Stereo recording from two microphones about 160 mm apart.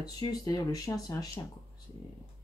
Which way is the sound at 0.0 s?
25° left (ahead or behind).